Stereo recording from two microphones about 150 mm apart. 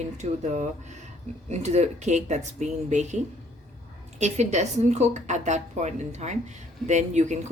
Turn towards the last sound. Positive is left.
turn(degrees=-50)  # may be behind; listen again after turning